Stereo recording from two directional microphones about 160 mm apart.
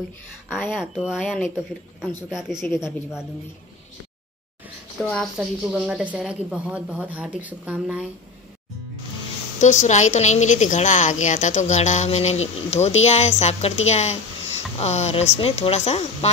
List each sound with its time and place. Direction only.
0.5 s speech: 10° left (ahead or behind)
0.9 s speech: centre (ahead or behind)
5.4 s a woman's voice: 5° right (ahead or behind)
9.6 s a woman's voice: 50° left (ahead or behind)